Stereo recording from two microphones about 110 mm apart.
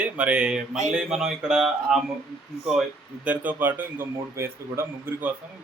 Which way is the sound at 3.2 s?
15° right (ahead or behind).